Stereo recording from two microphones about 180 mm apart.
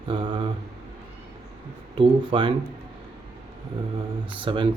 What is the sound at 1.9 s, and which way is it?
Speech, 30° right (ahead or behind).